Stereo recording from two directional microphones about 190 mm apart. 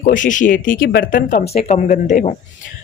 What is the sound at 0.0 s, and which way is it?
A woman's voice, 45° left (ahead or behind).